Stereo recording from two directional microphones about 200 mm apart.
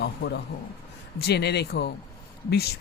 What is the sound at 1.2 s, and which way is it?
Speech, 55° left (ahead or behind).